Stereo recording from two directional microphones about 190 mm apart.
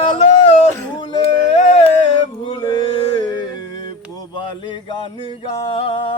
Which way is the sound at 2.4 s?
25° left (ahead or behind).